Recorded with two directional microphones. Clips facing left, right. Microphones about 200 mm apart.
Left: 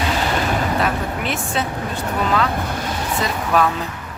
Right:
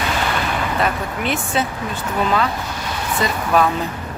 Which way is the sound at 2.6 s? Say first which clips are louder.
Left 3 dB; 55° left (ahead or behind).